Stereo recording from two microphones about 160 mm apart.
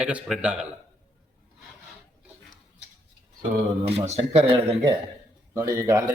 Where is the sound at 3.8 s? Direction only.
40° right (ahead or behind).